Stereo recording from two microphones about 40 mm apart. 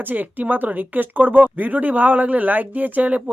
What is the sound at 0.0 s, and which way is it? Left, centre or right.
Speech, right.